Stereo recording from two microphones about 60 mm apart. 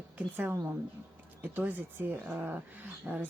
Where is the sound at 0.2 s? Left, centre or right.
Right.